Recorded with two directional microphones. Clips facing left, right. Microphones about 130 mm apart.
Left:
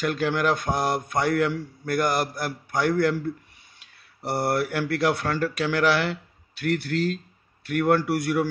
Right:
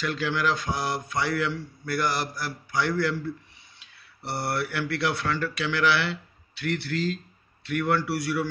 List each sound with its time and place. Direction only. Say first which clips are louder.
0.0 s a man's voice: left 3 dB; 50° left (ahead or behind)